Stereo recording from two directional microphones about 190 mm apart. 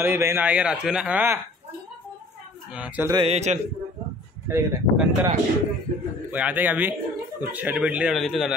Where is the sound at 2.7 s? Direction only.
5° right (ahead or behind).